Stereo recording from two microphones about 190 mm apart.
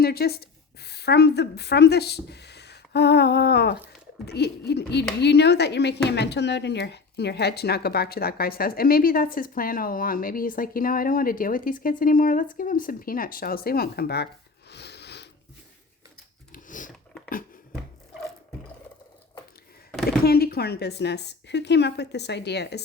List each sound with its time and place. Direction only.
0.0 s speech: 55° left (ahead or behind)
14.7 s a sound: 60° left (ahead or behind)
16.5 s dog: 45° left (ahead or behind)
20.1 s speech: 55° left (ahead or behind)